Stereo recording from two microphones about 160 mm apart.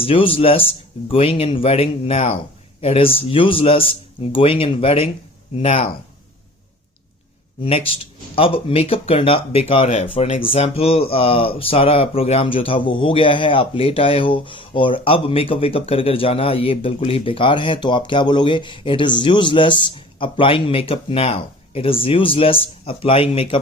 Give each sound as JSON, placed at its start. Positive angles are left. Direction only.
{"t": 0.0, "sound": "speech", "side_deg": 35}
{"t": 7.6, "sound": "speech", "side_deg": 40}